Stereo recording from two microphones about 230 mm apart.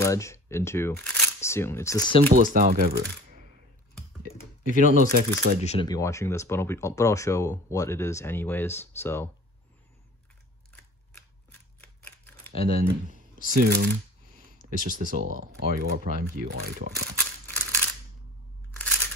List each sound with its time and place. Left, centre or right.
0.0 s speech: centre
2.3 s speech: right
4.8 s speech: right
5.6 s speech: left
5.9 s speech: centre
11.8 s typewriter: centre
13.5 s speech: right
17.2 s crushing: centre